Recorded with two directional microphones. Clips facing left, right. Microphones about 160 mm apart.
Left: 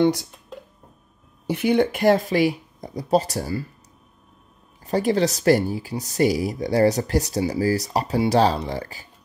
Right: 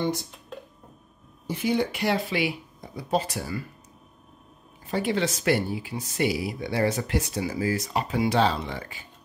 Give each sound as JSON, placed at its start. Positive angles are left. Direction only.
{"t": 0.0, "sound": "speech", "side_deg": 90}
{"t": 1.5, "sound": "speech", "side_deg": 65}
{"t": 4.8, "sound": "speech", "side_deg": 40}